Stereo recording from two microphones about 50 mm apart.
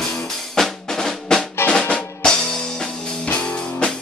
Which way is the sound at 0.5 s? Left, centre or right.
Centre.